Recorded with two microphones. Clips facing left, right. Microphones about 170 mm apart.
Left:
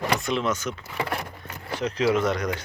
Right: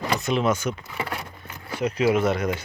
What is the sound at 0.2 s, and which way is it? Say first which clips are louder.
Speech: right 3 dB; 5° right (ahead or behind).